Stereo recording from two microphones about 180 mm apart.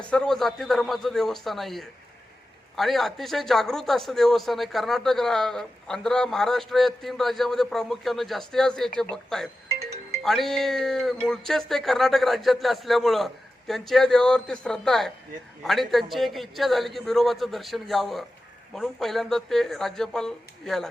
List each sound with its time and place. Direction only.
0.1 s a man's voice: 5° left (ahead or behind)